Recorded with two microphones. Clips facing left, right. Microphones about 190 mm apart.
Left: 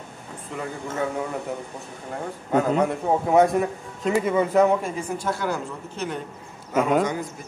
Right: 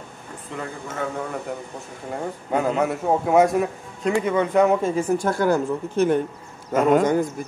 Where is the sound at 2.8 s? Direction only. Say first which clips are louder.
Right 1 dB; 5° right (ahead or behind).